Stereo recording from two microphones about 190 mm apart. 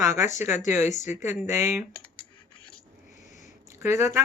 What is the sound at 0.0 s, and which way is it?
Speech, 15° right (ahead or behind).